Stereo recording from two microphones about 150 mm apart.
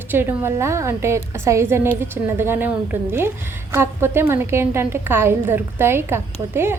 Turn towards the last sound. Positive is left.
turn(degrees=-15)  # may be behind; listen again after turning